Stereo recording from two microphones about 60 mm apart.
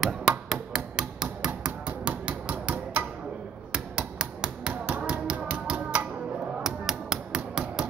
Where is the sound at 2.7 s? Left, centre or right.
Right.